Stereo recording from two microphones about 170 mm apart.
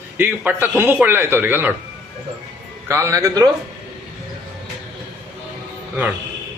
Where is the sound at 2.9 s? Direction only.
15° right (ahead or behind).